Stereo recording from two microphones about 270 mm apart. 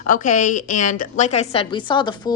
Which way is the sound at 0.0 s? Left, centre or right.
Left.